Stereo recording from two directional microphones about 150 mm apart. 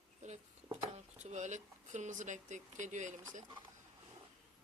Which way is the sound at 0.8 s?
50° right (ahead or behind).